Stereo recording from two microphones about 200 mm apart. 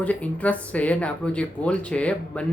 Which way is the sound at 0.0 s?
5° left (ahead or behind).